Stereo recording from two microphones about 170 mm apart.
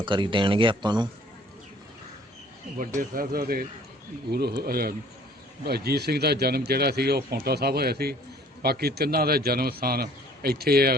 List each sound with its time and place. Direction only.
0.0 s speech: 30° right (ahead or behind)
2.7 s a man's voice: 50° right (ahead or behind)
4.3 s a man's voice: 70° right (ahead or behind)